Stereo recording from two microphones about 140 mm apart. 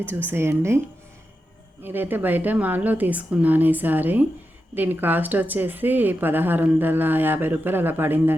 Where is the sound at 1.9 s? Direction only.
15° right (ahead or behind).